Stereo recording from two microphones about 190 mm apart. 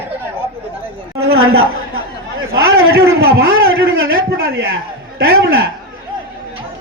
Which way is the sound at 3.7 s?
90° right.